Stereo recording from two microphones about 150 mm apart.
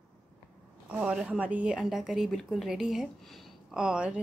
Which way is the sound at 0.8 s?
5° right (ahead or behind).